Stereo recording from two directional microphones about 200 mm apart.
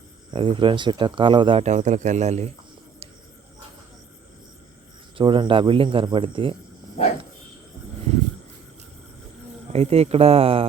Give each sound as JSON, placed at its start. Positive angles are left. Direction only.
{"t": 0.3, "sound": "speech", "side_deg": -25}
{"t": 5.1, "sound": "speech", "side_deg": -25}
{"t": 9.7, "sound": "speech", "side_deg": -30}